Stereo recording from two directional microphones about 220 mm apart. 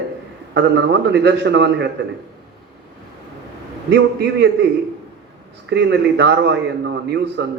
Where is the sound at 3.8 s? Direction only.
50° right (ahead or behind).